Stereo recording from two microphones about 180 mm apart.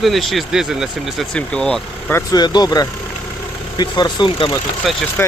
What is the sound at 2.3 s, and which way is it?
Speech, 25° left (ahead or behind).